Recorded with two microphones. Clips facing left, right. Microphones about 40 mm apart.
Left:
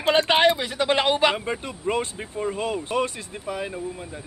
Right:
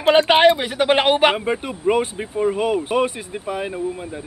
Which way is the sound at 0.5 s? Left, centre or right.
Right.